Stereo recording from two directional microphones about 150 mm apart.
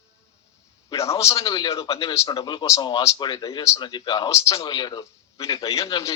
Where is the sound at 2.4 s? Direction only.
30° left (ahead or behind).